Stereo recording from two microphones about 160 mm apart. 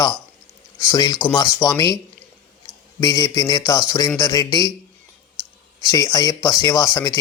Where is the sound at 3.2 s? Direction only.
25° left (ahead or behind).